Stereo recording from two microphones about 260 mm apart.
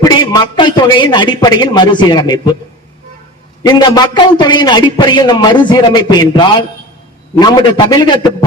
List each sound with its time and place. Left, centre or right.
0.0 s a man's voice: centre
3.7 s a man's voice: centre